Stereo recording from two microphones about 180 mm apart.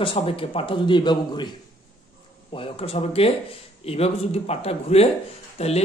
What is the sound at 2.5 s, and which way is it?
Speech, 30° left (ahead or behind).